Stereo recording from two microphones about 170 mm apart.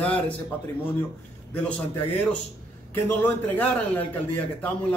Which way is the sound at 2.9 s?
15° left (ahead or behind).